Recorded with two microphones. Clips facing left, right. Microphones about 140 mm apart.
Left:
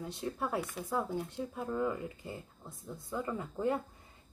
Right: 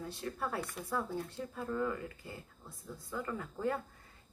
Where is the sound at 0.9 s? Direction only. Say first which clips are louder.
Left 2 dB; 20° left (ahead or behind).